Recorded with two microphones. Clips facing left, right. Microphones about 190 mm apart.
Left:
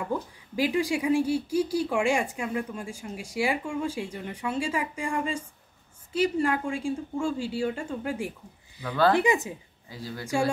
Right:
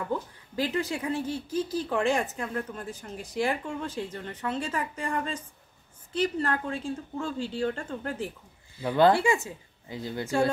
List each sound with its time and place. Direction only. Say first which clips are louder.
0.0 s speech: left 1 dB; 10° left (ahead or behind)
8.8 s speech: right 3 dB; 20° right (ahead or behind)
9.1 s speech: left 1 dB; 20° left (ahead or behind)
9.8 s speech: right 4 dB; 20° right (ahead or behind)